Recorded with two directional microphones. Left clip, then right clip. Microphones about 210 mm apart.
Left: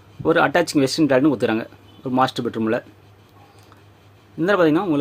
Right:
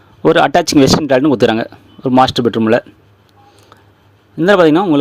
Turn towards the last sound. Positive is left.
turn(degrees=-40)  # may be behind; listen again after turning